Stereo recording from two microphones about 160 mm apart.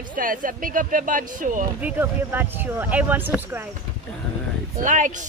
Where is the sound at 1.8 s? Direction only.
10° right (ahead or behind).